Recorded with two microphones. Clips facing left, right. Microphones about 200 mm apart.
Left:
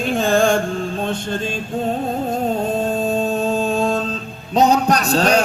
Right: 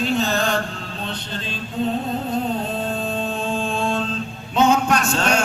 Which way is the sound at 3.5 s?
40° left (ahead or behind).